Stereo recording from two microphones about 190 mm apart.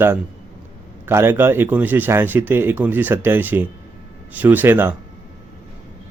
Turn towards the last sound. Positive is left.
turn(degrees=-10)  # may be behind; listen again after turning